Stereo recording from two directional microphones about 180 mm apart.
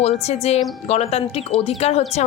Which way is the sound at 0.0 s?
35° left (ahead or behind).